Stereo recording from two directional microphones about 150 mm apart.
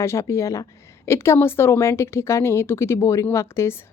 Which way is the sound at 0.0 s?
20° left (ahead or behind).